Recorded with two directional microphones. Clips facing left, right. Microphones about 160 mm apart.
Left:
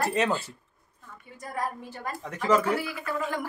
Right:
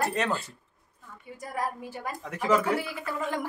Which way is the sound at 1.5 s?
10° right (ahead or behind).